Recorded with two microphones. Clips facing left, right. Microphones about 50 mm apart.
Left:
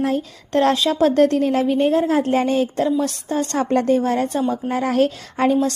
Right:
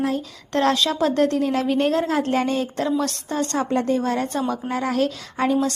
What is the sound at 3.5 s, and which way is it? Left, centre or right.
Speech, left.